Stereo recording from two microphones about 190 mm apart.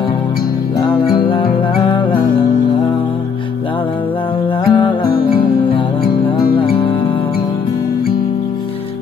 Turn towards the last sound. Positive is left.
turn(degrees=30)  # may be behind; listen again after turning